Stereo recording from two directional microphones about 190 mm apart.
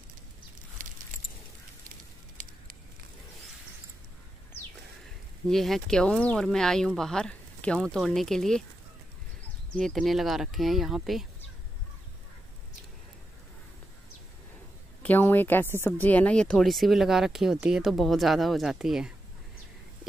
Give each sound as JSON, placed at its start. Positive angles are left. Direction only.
{"t": 0.8, "sound": "a sound", "side_deg": -45}
{"t": 5.5, "sound": "speech", "side_deg": 0}
{"t": 9.8, "sound": "speech", "side_deg": 0}
{"t": 15.0, "sound": "speech", "side_deg": 10}